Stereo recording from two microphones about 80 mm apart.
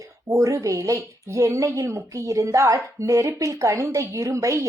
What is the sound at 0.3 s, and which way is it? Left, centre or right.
A woman's voice, right.